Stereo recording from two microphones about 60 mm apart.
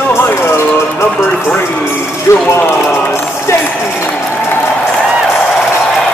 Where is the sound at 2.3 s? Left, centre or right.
Left.